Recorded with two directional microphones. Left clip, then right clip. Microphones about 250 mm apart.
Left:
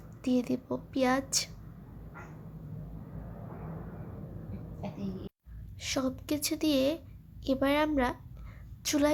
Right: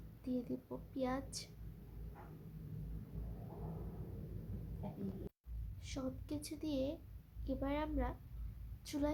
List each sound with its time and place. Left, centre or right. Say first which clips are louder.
0.2 s a woman's voice: left 12 dB; centre
5.8 s a woman's voice: left 13 dB; centre